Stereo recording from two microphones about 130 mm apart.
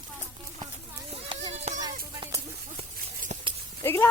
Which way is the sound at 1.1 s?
50° right (ahead or behind).